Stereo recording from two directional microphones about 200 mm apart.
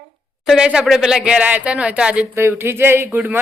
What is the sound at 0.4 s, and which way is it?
Speech, 5° right (ahead or behind).